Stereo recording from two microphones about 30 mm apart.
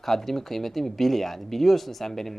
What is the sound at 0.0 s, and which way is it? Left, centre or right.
A man's voice, centre.